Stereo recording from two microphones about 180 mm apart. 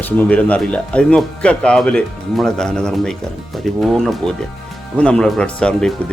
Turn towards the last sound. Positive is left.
turn(degrees=5)  # may be behind; listen again after turning